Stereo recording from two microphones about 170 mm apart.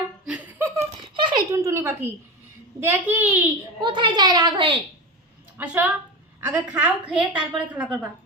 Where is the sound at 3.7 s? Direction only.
25° right (ahead or behind).